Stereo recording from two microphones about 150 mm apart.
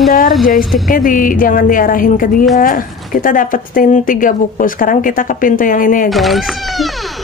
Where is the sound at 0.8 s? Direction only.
65° left (ahead or behind).